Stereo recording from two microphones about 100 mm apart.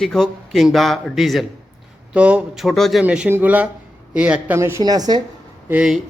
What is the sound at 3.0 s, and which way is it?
Mantra, 10° right (ahead or behind).